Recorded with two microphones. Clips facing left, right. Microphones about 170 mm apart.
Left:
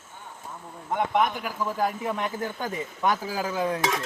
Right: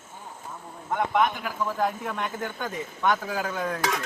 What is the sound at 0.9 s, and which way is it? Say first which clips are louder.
A man's voice: even; 10° left (ahead or behind).